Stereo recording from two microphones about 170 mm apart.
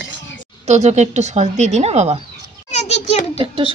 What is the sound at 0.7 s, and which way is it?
A woman's voice, 40° right (ahead or behind).